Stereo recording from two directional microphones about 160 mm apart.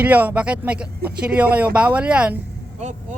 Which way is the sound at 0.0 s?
10° right (ahead or behind).